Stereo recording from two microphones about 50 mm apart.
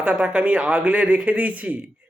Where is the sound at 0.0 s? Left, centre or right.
Right.